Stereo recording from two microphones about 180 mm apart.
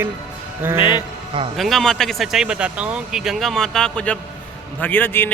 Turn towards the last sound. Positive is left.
turn(degrees=10)  # may be behind; listen again after turning